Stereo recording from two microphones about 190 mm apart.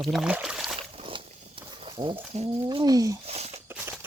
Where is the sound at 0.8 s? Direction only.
30° right (ahead or behind).